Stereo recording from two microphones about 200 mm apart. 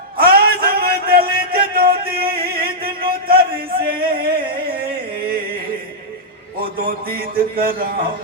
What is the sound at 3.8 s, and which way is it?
Music, 50° right (ahead or behind).